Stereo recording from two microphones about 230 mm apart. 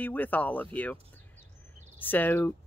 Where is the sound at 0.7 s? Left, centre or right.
Centre.